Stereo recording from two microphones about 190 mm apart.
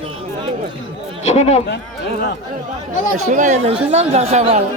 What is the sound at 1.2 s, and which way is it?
Speech, 35° left (ahead or behind).